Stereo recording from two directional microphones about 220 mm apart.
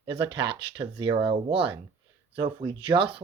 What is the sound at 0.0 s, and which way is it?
Speech, 20° right (ahead or behind).